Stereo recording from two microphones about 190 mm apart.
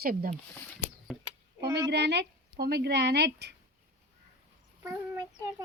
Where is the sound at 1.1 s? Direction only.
Centre (ahead or behind).